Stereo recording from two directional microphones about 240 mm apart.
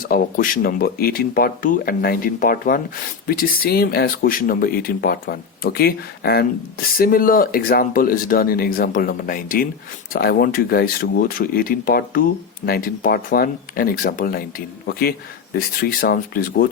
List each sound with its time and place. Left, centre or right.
0.0 s speech: left